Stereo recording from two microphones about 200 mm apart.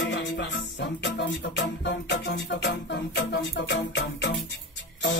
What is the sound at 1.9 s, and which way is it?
Music, 60° left (ahead or behind).